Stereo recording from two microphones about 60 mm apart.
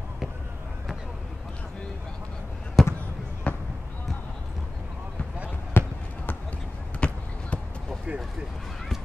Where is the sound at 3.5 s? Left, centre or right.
Left.